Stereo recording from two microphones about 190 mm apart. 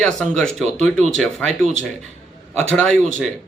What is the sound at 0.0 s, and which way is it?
A man's voice, 5° left (ahead or behind).